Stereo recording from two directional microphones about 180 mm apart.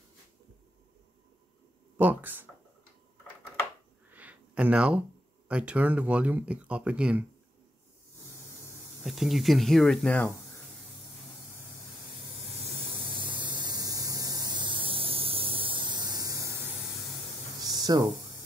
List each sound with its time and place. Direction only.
2.0 s speech: 10° right (ahead or behind)
4.1 s a sound: 10° right (ahead or behind)
5.5 s speech: 5° right (ahead or behind)
9.0 s speech: centre (ahead or behind)
12.6 s spray: 30° right (ahead or behind)
17.6 s a sound: 20° right (ahead or behind)